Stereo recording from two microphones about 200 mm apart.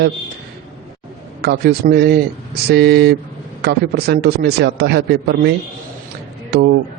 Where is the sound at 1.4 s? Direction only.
50° right (ahead or behind).